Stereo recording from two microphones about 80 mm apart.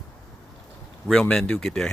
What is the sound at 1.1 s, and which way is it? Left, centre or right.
Speech, centre.